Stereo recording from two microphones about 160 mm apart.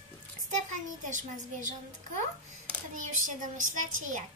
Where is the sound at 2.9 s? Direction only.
55° right (ahead or behind).